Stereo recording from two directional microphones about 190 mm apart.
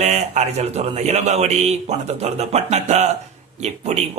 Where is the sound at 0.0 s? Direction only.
35° right (ahead or behind).